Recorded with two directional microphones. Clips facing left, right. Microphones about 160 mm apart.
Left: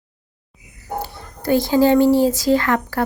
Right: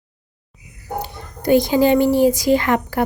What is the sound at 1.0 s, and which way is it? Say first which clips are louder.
Speech: right 2 dB; 20° right (ahead or behind).